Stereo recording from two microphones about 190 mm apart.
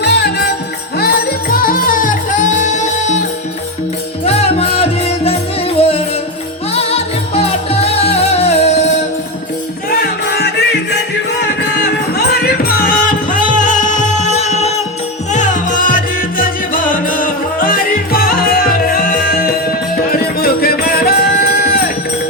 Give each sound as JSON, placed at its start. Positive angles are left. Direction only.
{"t": 0.0, "sound": "music", "side_deg": 60}
{"t": 4.3, "sound": "music", "side_deg": 30}
{"t": 6.7, "sound": "music", "side_deg": 30}
{"t": 9.9, "sound": "music", "side_deg": 55}
{"t": 12.1, "sound": "music", "side_deg": 55}